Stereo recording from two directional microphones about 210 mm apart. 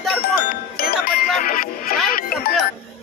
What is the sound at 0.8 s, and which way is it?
Speech, 45° left (ahead or behind).